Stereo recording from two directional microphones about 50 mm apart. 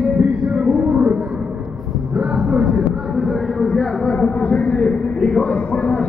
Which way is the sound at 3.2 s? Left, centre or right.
Centre.